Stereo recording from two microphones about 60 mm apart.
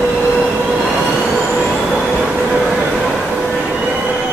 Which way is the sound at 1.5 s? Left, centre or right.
Centre.